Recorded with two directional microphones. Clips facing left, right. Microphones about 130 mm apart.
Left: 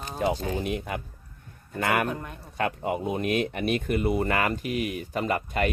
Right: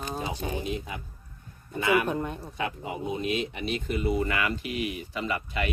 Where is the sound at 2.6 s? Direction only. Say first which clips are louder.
Left 7 dB; 55° left (ahead or behind).